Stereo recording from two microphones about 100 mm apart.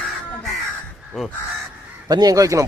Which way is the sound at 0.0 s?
Centre (ahead or behind).